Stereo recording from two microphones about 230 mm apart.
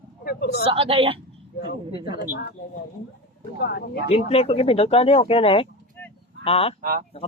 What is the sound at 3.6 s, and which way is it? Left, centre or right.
Speech, left.